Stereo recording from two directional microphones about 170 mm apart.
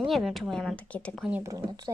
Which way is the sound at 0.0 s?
Centre (ahead or behind).